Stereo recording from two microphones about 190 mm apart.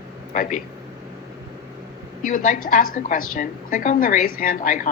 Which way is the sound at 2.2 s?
45° left (ahead or behind).